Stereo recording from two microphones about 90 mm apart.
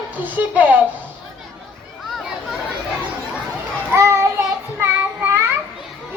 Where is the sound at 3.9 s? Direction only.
30° right (ahead or behind).